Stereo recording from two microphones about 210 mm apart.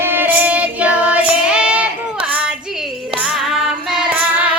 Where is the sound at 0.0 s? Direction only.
10° right (ahead or behind).